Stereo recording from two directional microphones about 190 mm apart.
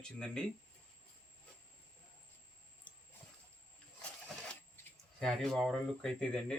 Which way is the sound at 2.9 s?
25° left (ahead or behind).